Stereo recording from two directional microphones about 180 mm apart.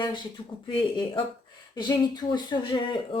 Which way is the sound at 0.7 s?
30° left (ahead or behind).